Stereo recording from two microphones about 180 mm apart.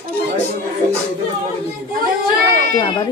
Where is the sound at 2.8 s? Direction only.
25° left (ahead or behind).